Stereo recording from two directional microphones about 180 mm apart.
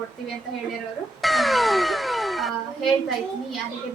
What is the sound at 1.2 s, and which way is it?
Speech, centre (ahead or behind).